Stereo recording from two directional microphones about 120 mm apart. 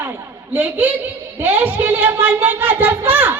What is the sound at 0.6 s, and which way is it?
Speech, 15° right (ahead or behind).